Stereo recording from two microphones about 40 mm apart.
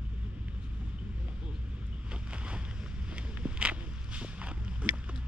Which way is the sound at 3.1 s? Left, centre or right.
Right.